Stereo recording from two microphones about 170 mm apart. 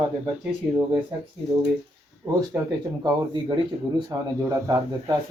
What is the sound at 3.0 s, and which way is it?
Speech, 25° right (ahead or behind).